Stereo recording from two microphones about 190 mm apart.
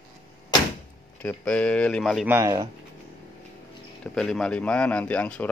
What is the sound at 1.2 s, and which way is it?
Speech, 5° left (ahead or behind).